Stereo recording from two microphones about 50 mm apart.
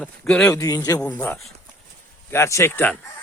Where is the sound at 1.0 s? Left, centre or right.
Left.